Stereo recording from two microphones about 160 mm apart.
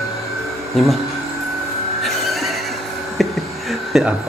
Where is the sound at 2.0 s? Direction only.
Centre (ahead or behind).